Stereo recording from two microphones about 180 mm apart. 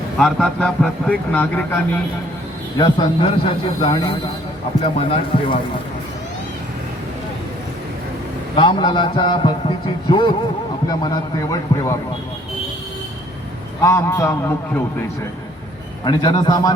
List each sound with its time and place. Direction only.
0.2 s speech: centre (ahead or behind)
2.7 s a man's voice: 25° left (ahead or behind)
4.9 s speech: 30° left (ahead or behind)
8.5 s a man's voice: 25° left (ahead or behind)
13.8 s a man's voice: 15° left (ahead or behind)
16.0 s a man's voice: 25° left (ahead or behind)